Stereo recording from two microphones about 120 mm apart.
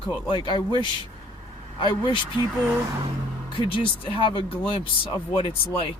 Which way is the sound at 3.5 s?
50° left (ahead or behind).